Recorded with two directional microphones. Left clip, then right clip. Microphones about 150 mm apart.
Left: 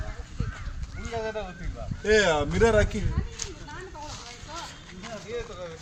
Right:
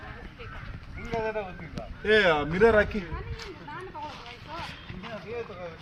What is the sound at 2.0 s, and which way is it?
Speech, 65° left (ahead or behind).